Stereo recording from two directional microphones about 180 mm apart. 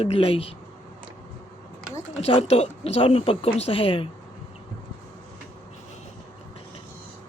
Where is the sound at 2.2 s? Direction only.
35° left (ahead or behind).